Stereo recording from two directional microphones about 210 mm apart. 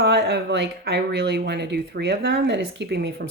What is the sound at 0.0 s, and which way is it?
Speech, 55° right (ahead or behind).